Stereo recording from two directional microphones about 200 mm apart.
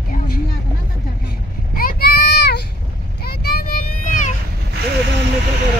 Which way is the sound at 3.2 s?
50° left (ahead or behind).